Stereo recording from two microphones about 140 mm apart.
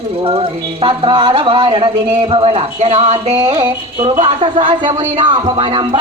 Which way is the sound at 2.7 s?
50° right (ahead or behind).